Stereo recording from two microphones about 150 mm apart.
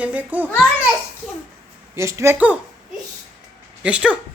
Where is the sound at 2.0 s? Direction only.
20° right (ahead or behind).